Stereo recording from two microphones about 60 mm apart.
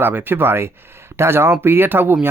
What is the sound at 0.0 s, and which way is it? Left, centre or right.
Speech, right.